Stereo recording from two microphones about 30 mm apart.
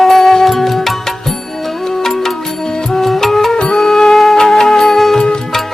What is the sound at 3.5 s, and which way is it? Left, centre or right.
Music, left.